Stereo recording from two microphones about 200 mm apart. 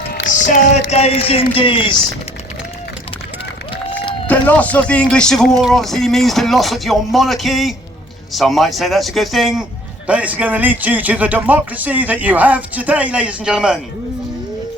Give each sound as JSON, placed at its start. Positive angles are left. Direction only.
{"t": 0.1, "sound": "speech", "side_deg": 40}
{"t": 4.3, "sound": "speech", "side_deg": 10}